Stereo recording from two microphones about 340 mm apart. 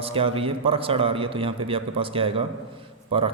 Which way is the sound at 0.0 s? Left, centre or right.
Centre.